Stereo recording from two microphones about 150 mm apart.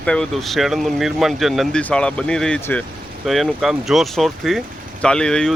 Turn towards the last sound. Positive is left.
turn(degrees=5)  # may be behind; listen again after turning